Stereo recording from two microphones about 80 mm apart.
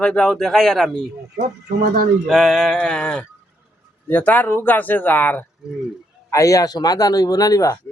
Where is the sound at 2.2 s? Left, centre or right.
Centre.